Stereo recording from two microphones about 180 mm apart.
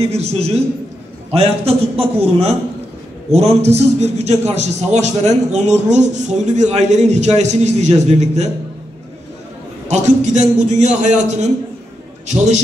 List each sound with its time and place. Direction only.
0.0 s a man's voice: 35° right (ahead or behind)
9.8 s a man's voice: 40° right (ahead or behind)